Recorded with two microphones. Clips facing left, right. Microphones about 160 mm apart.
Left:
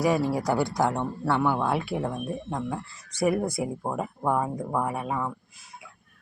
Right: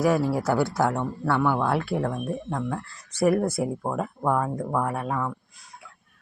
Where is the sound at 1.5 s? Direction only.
5° left (ahead or behind).